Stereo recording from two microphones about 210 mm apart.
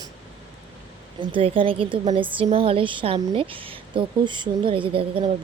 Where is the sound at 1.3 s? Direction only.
25° right (ahead or behind).